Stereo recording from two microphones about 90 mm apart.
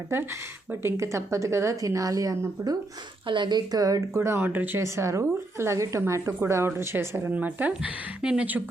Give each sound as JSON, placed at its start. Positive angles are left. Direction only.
{"t": 0.1, "sound": "a woman's voice", "side_deg": -30}
{"t": 3.2, "sound": "speech", "side_deg": -60}
{"t": 4.1, "sound": "speech", "side_deg": -30}
{"t": 4.8, "sound": "a woman's voice", "side_deg": -35}